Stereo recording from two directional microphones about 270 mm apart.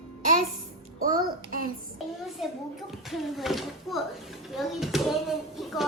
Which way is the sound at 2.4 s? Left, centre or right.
Centre.